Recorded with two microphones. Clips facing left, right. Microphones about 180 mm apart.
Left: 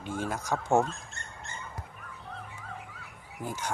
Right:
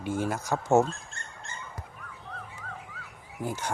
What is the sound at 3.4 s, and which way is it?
Speech, 20° right (ahead or behind).